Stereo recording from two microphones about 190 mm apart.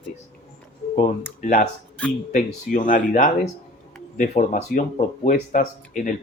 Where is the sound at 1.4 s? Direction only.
45° left (ahead or behind).